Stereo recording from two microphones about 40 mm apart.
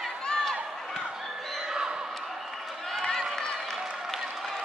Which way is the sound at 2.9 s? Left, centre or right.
Centre.